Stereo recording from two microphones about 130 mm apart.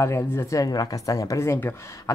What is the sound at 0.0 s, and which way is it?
Speech, 20° left (ahead or behind).